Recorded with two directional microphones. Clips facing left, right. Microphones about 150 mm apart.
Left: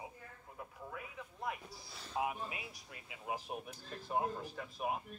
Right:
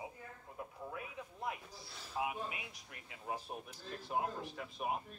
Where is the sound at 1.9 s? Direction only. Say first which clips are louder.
Left 1 dB; 5° right (ahead or behind).